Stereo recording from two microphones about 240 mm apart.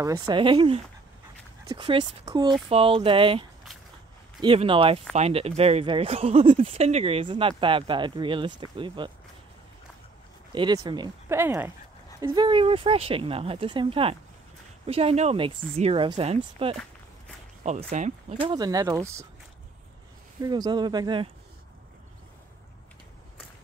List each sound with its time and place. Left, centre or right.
0.3 s speech: centre
10.5 s speech: centre
20.4 s speech: centre